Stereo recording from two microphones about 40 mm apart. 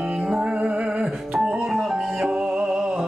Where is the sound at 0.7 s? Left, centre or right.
Right.